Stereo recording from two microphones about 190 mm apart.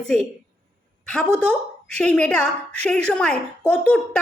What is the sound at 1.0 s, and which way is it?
A woman's voice, 5° left (ahead or behind).